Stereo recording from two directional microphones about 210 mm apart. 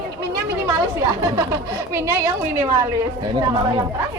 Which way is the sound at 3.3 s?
20° right (ahead or behind).